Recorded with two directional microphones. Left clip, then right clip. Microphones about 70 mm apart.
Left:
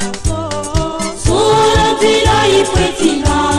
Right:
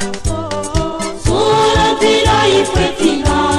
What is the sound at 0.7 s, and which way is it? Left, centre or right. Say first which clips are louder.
Music: left 1 dB; left.